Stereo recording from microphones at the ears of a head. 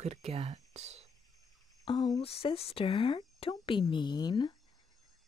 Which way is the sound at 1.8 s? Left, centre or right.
Left.